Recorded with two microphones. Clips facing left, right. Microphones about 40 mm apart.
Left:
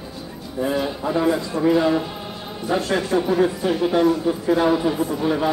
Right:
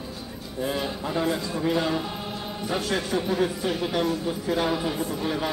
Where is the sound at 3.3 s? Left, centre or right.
Centre.